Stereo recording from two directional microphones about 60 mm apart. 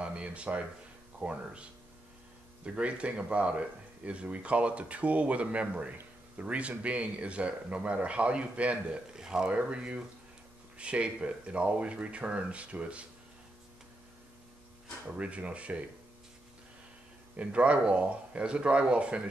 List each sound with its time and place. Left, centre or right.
0.0 s speech: centre
15.1 s speech: right
17.4 s speech: right